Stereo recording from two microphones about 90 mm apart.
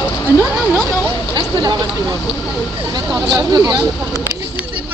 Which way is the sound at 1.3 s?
55° right (ahead or behind).